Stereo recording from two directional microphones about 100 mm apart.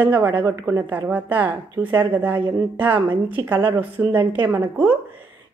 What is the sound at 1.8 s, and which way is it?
Speech, 20° right (ahead or behind).